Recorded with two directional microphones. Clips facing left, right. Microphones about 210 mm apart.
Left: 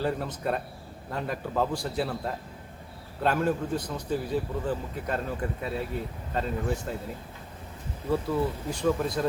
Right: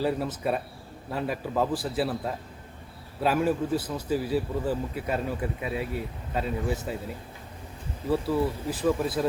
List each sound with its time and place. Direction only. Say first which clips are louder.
0.0 s a man's voice: right 2 dB; 5° right (ahead or behind)
8.1 s a man's voice: right 1 dB; 5° right (ahead or behind)